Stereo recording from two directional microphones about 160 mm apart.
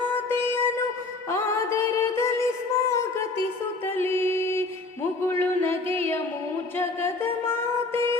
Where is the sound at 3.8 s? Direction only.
15° left (ahead or behind).